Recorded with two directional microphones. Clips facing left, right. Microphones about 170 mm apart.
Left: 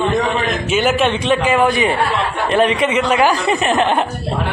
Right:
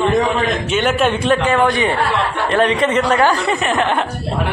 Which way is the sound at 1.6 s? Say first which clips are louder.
Left 1 dB; 15° left (ahead or behind).